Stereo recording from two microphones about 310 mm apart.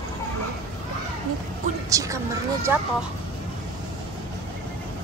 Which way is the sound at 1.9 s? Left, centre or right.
Centre.